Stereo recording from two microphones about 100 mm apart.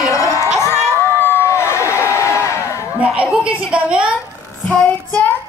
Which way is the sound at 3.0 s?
10° right (ahead or behind).